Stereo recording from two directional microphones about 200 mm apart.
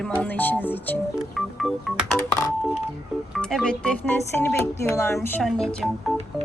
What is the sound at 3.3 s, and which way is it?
Speech, centre (ahead or behind).